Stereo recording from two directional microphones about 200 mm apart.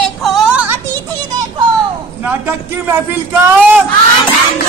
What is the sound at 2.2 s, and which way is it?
Speech, 10° right (ahead or behind).